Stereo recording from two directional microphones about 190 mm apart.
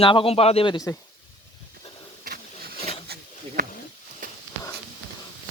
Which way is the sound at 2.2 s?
55° right (ahead or behind).